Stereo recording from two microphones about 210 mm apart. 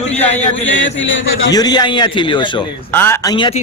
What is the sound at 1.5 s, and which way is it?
A man's voice, 20° left (ahead or behind).